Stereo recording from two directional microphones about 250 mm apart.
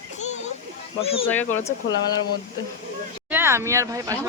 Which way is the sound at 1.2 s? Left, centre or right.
Centre.